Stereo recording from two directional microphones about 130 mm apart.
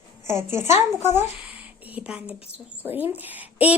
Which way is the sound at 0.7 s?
60° left (ahead or behind).